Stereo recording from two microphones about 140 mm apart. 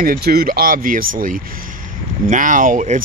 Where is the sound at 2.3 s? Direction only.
70° right (ahead or behind).